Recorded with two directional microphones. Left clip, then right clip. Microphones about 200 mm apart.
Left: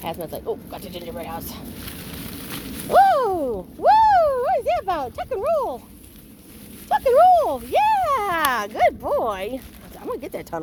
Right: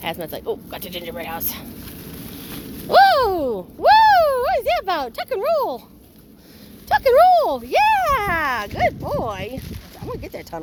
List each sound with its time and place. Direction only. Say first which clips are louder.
0.0 s speech: right 2 dB; 10° right (ahead or behind)
2.5 s a sound: left 1 dB; 5° right (ahead or behind)
2.9 s speech: right 2 dB; 20° right (ahead or behind)
6.8 s speech: right 2 dB; 20° right (ahead or behind); by 10.6 s 15° left (ahead or behind)